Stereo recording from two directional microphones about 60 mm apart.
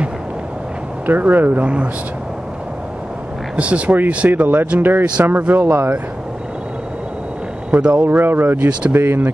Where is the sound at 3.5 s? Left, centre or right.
Right.